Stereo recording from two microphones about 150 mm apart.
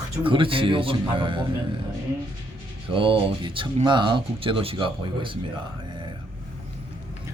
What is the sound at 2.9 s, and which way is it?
Speech, 35° right (ahead or behind).